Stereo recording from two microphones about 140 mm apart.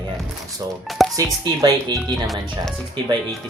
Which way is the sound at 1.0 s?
Centre (ahead or behind).